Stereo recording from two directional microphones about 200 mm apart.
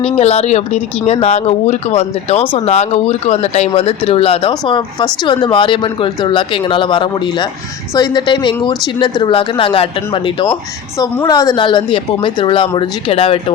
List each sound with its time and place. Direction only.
0.0 s speech: 30° left (ahead or behind)